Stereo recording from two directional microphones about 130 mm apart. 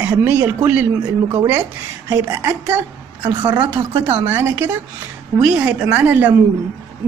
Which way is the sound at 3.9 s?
40° right (ahead or behind).